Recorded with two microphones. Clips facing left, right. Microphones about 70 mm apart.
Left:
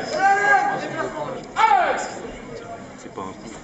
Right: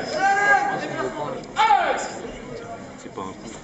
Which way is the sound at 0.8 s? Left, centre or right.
Centre.